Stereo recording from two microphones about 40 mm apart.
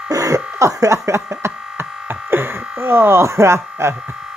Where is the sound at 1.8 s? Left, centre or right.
Right.